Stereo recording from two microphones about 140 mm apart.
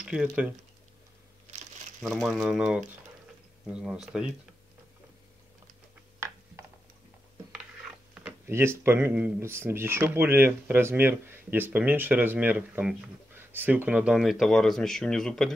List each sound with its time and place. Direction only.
0.0 s speech: 5° right (ahead or behind)
2.0 s speech: centre (ahead or behind)
6.1 s a sound: 20° right (ahead or behind)
8.1 s speech: 15° right (ahead or behind); by 15.5 s 5° left (ahead or behind)